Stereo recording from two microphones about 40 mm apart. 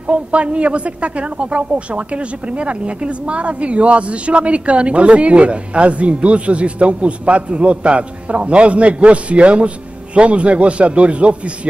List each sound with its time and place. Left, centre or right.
0.0 s a woman's voice: right